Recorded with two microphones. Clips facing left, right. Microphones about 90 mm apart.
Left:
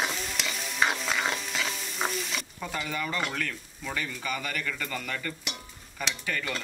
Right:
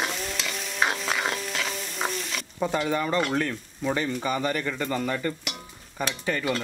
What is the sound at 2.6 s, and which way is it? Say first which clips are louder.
Speech: right 9 dB; 30° right (ahead or behind).